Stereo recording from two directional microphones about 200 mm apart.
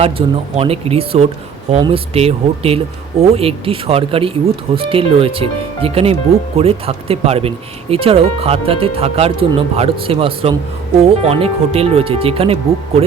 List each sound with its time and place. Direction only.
0.0 s speech: 30° right (ahead or behind)